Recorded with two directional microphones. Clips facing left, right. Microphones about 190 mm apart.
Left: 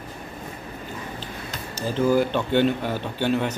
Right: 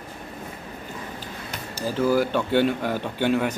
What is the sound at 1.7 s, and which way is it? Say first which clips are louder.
Speech: left 1 dB; 10° right (ahead or behind).